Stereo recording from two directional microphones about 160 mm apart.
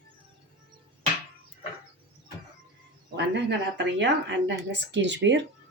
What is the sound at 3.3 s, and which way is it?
Speech, 90° right.